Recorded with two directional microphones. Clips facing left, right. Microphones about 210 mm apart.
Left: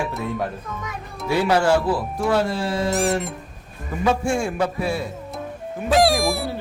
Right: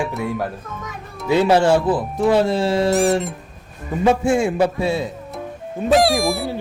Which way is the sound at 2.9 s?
Centre (ahead or behind).